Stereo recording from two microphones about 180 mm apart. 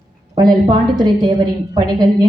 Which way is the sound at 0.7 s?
25° right (ahead or behind).